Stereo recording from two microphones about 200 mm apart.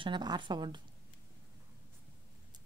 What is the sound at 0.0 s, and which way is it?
Speech, 20° right (ahead or behind).